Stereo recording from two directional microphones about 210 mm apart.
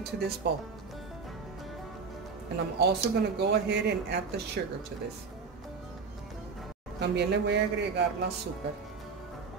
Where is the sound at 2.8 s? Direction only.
50° right (ahead or behind).